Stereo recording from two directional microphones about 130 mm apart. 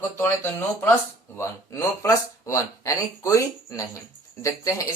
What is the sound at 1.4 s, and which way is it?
Speech, 25° left (ahead or behind).